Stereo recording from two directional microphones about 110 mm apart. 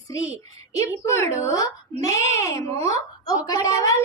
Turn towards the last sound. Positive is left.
turn(degrees=35)  # may be behind; listen again after turning